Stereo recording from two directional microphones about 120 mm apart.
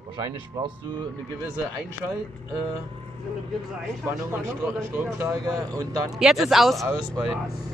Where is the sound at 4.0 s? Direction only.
20° right (ahead or behind).